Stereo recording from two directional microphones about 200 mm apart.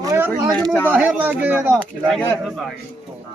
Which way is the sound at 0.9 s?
5° right (ahead or behind).